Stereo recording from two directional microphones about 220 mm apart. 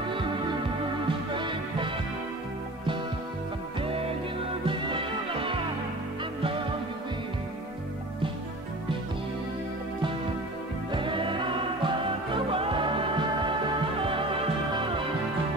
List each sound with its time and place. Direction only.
0.1 s music: 25° right (ahead or behind)
4.6 s music: 25° right (ahead or behind)
10.9 s music: 20° right (ahead or behind)